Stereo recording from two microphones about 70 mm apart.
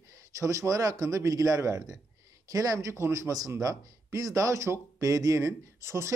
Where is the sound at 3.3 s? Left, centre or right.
Right.